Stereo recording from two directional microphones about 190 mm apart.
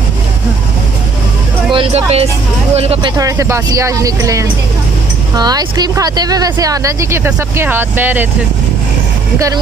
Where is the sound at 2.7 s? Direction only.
30° right (ahead or behind).